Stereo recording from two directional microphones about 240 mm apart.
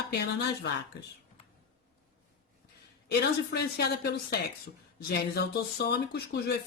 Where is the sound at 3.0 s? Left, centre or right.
Left.